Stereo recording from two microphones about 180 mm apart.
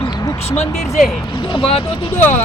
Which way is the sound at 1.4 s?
25° left (ahead or behind).